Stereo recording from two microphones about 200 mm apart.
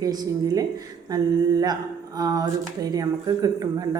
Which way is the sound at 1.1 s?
20° right (ahead or behind).